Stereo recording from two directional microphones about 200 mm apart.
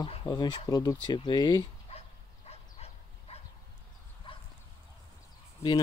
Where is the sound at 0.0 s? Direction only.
25° left (ahead or behind).